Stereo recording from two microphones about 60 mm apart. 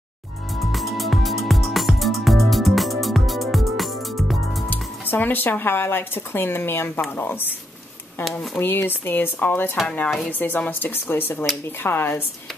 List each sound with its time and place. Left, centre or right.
0.6 s music: centre
4.6 s speech: left
8.5 s speech: left